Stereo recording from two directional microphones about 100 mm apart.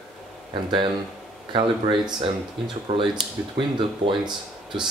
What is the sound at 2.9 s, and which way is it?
Speech, 65° right (ahead or behind).